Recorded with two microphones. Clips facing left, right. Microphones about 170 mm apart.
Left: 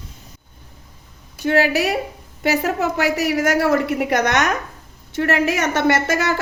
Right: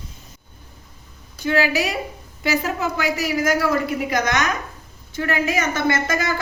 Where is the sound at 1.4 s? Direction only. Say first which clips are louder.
Left 3 dB; 60° left (ahead or behind).